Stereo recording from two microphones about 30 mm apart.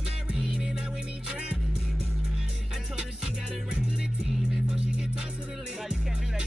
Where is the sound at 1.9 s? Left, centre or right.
Right.